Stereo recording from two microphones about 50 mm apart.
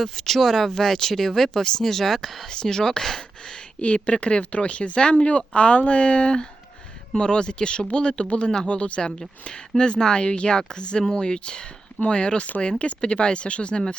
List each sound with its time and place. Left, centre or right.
0.0 s speech: centre
3.8 s speech: left